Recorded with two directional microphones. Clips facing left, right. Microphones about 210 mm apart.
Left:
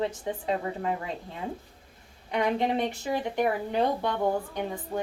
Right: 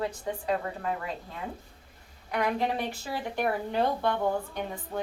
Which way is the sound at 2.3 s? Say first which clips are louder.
Left 2 dB; 25° left (ahead or behind).